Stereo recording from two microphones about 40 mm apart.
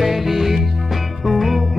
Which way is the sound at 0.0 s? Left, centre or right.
Centre.